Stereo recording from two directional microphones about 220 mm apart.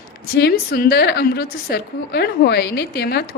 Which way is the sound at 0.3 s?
45° left (ahead or behind).